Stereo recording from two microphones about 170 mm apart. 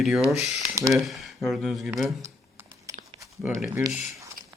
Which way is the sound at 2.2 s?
20° right (ahead or behind).